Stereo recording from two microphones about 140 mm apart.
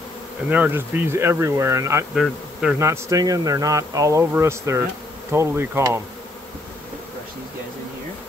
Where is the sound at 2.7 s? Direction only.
20° right (ahead or behind).